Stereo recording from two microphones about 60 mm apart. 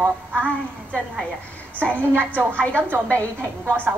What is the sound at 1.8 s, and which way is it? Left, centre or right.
Speech, left.